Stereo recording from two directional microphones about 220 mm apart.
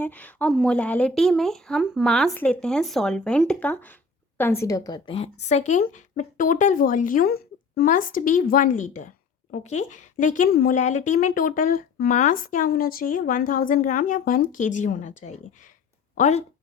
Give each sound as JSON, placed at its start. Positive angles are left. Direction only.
{"t": 0.0, "sound": "a woman's voice", "side_deg": 5}